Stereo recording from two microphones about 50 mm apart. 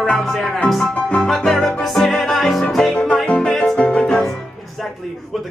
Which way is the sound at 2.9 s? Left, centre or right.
Left.